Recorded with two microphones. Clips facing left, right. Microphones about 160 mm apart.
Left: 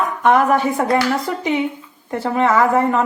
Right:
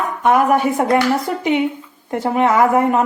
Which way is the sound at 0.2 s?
10° right (ahead or behind).